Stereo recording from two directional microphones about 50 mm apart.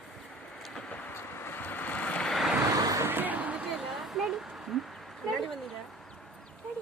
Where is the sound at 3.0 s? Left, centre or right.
Right.